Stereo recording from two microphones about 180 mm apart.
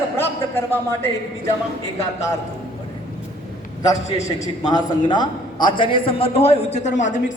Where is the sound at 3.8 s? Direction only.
20° left (ahead or behind); by 7.1 s 40° left (ahead or behind).